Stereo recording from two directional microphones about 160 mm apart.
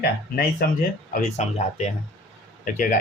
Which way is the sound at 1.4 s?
45° left (ahead or behind).